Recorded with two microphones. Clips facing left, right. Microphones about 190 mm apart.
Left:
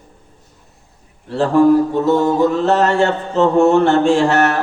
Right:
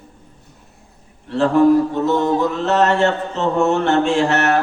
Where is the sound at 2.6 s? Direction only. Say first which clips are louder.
Left 2 dB; 35° left (ahead or behind).